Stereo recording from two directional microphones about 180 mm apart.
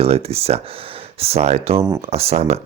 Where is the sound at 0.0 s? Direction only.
35° right (ahead or behind).